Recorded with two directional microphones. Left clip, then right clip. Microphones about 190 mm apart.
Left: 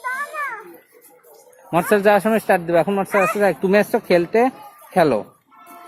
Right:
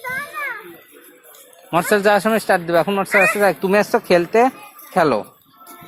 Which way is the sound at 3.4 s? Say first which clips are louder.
Right 1 dB; 15° left (ahead or behind).